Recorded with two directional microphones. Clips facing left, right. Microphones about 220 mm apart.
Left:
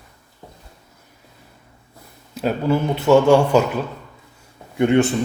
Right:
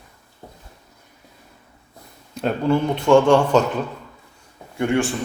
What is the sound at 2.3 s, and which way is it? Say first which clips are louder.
Speech: even; 5° left (ahead or behind).